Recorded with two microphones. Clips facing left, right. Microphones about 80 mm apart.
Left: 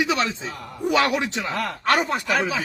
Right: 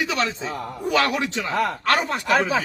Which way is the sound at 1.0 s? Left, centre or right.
Left.